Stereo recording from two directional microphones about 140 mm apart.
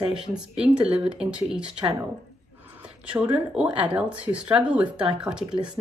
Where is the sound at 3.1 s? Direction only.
10° right (ahead or behind).